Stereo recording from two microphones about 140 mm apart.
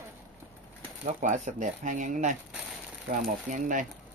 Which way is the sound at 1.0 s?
60° right (ahead or behind).